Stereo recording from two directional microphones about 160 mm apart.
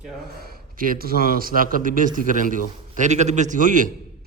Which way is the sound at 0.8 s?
65° right (ahead or behind).